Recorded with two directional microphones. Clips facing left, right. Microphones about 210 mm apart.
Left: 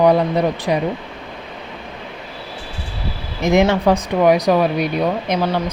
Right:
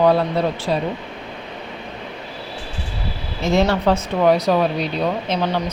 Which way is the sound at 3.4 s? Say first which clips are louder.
Left 3 dB; 15° left (ahead or behind).